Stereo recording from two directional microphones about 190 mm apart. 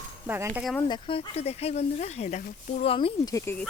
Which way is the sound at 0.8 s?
25° left (ahead or behind).